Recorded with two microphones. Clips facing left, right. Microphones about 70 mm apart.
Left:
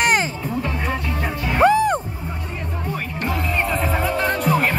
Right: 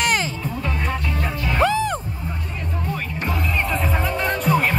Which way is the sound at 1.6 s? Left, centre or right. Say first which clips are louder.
Left 5 dB; left.